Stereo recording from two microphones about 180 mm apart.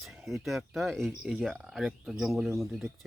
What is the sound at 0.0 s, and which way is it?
Speech, centre (ahead or behind).